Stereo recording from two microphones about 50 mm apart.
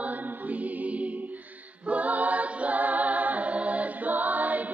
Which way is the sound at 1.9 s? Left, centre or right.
Right.